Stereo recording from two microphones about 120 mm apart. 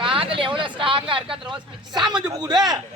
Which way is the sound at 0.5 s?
45° right (ahead or behind).